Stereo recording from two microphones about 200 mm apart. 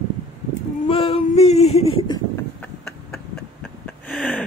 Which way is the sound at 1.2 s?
35° left (ahead or behind).